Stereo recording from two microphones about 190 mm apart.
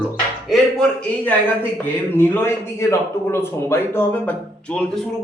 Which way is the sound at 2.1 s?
10° left (ahead or behind).